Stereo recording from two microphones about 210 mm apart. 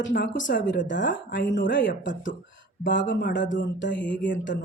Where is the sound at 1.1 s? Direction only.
40° left (ahead or behind).